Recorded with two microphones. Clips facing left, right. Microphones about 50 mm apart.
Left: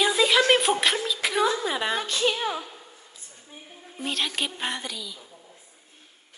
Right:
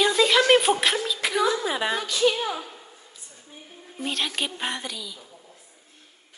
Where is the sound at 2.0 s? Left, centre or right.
Left.